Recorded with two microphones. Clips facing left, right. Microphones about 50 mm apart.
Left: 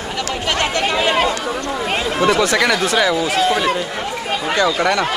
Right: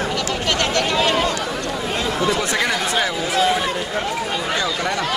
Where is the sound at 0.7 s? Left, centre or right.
Left.